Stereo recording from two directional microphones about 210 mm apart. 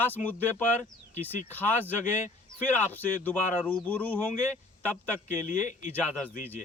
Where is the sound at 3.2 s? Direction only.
10° left (ahead or behind).